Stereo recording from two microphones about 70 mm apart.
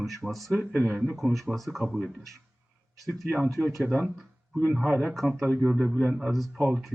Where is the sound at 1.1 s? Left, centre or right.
Centre.